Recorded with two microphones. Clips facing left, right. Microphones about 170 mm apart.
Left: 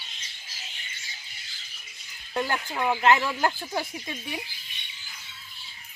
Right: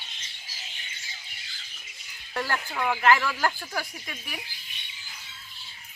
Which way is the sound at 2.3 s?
20° left (ahead or behind).